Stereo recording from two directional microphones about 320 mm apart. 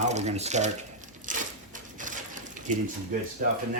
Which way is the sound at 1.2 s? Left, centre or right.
Right.